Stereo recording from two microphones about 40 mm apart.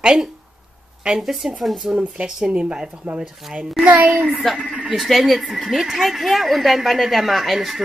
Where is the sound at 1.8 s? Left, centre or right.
Right.